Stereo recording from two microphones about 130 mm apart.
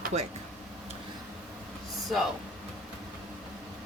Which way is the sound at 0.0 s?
55° right (ahead or behind).